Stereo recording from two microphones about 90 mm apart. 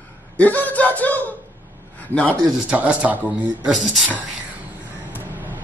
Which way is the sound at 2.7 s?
15° right (ahead or behind).